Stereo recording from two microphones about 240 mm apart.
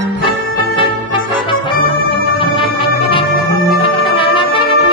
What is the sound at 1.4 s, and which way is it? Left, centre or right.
Music, left.